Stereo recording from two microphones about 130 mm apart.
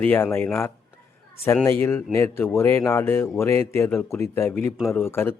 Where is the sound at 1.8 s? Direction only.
15° left (ahead or behind).